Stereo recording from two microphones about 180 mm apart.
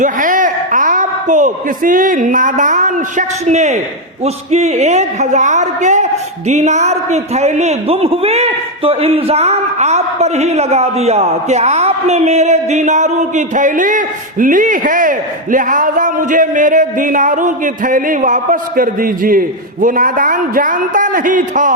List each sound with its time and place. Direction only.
0.0 s a woman's voice: 45° right (ahead or behind)